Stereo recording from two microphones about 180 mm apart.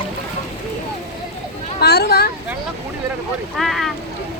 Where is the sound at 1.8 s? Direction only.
65° left (ahead or behind).